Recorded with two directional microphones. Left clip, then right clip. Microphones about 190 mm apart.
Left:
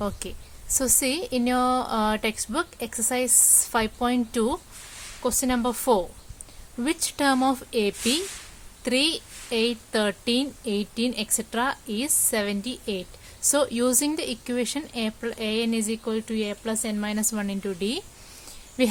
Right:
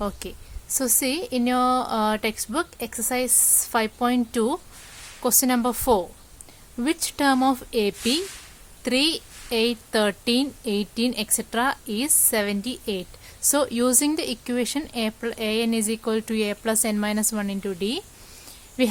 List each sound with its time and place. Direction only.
0.0 s a woman's voice: 10° right (ahead or behind)